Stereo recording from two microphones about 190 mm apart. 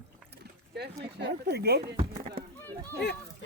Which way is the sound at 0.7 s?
60° right (ahead or behind).